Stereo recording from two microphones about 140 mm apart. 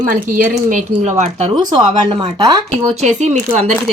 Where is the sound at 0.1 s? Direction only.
70° right (ahead or behind).